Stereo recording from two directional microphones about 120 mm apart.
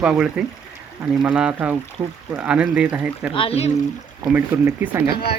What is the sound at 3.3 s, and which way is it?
Speech, 50° left (ahead or behind).